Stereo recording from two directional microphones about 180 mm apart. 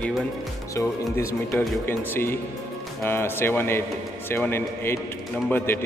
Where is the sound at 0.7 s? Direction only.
15° left (ahead or behind).